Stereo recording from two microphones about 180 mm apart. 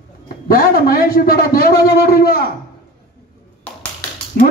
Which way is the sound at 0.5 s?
55° left (ahead or behind).